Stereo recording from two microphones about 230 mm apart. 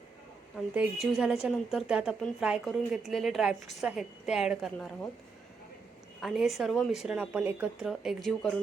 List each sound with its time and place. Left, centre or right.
0.5 s a woman's voice: centre
6.2 s a woman's voice: centre